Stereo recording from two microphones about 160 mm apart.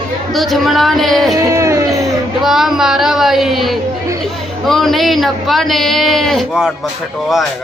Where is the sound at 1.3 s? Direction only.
20° right (ahead or behind).